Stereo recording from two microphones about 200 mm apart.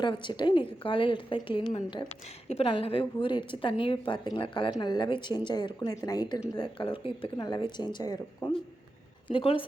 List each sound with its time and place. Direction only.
0.0 s a woman's voice: 25° left (ahead or behind)